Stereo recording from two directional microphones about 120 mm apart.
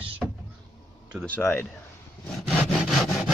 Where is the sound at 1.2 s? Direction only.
15° left (ahead or behind).